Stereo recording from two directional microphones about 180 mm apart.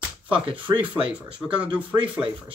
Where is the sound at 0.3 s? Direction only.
30° right (ahead or behind).